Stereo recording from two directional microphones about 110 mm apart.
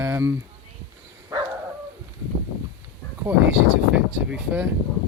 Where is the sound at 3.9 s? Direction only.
10° right (ahead or behind).